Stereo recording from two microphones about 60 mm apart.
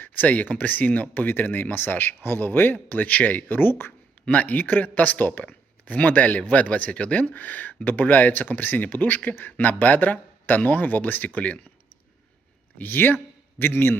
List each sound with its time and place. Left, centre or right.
0.0 s speech: left
4.3 s speech: left
12.8 s speech: left